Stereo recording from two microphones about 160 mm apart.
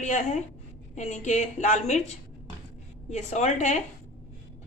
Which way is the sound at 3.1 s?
45° left (ahead or behind).